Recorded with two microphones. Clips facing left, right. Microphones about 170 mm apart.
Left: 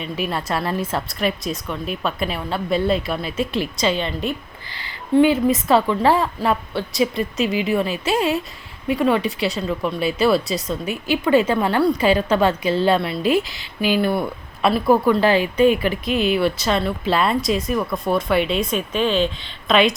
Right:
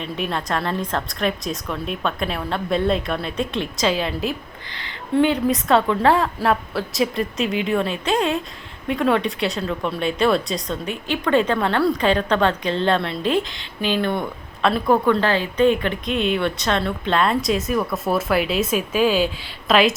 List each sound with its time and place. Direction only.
0.0 s speech: 5° left (ahead or behind)